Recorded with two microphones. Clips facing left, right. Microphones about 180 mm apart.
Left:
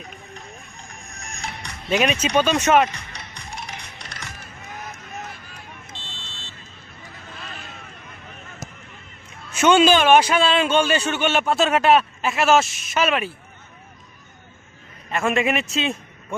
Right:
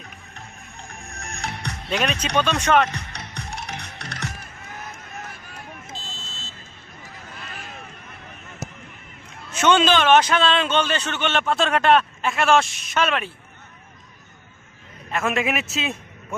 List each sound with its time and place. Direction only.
0.3 s music: 60° right (ahead or behind)
1.9 s a man's voice: 5° left (ahead or behind)
3.1 s music: 65° right (ahead or behind)
9.5 s a man's voice: 10° left (ahead or behind)
15.1 s a man's voice: centre (ahead or behind)